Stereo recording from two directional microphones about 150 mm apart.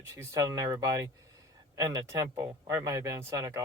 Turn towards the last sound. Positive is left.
turn(degrees=-20)  # may be behind; listen again after turning